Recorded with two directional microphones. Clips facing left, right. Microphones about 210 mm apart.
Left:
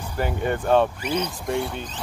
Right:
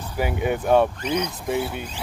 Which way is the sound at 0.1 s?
10° right (ahead or behind).